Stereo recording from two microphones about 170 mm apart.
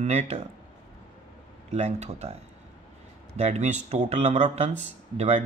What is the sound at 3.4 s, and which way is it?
Speech, 40° right (ahead or behind).